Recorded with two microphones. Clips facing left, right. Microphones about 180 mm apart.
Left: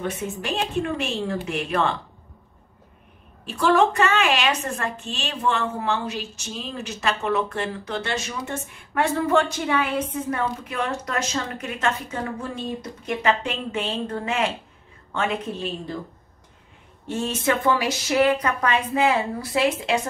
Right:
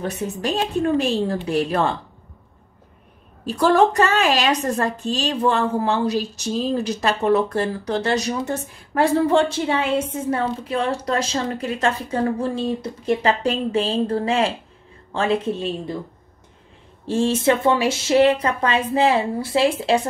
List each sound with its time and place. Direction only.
0.0 s a woman's voice: 35° right (ahead or behind)
3.4 s a woman's voice: 40° right (ahead or behind)
17.0 s speech: 30° right (ahead or behind)